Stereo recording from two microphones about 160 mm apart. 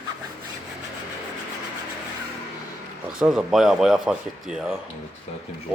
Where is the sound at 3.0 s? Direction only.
5° right (ahead or behind).